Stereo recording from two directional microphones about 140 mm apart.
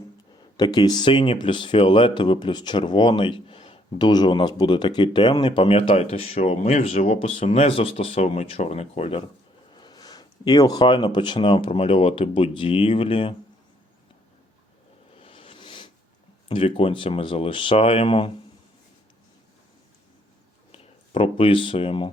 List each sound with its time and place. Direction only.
0.5 s speech: 30° left (ahead or behind)
9.7 s speech: 30° left (ahead or behind)
15.1 s a sound: 40° left (ahead or behind)
16.5 s speech: 40° left (ahead or behind)
20.7 s speech: 40° left (ahead or behind)